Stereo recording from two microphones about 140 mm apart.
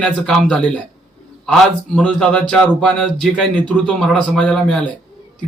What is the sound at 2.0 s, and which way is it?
A man's voice, 5° left (ahead or behind).